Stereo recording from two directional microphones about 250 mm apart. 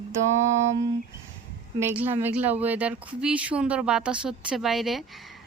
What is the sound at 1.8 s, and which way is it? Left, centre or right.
A woman's voice, centre.